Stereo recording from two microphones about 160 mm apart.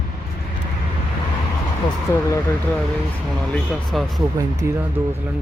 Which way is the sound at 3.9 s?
Centre (ahead or behind).